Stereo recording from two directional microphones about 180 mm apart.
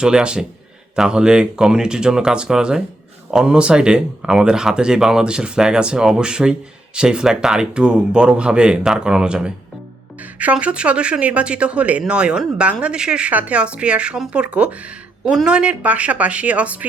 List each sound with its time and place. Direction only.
0.0 s speech: 5° right (ahead or behind)